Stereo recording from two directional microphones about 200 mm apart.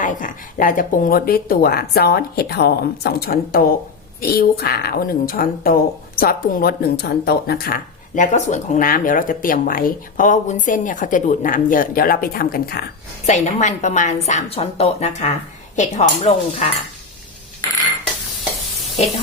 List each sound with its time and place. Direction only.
0.0 s speech: 40° left (ahead or behind)
13.2 s a woman's voice: 35° left (ahead or behind)